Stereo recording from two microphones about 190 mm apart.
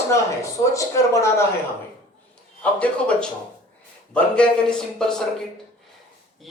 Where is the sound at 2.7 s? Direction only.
5° left (ahead or behind).